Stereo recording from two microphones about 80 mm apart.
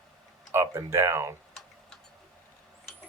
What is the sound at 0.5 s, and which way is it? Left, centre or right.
Speech, right.